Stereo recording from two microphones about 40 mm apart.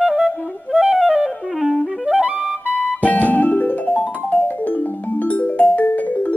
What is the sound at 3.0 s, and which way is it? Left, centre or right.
Music, left.